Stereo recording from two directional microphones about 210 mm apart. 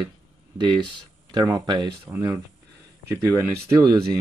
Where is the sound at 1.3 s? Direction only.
20° right (ahead or behind).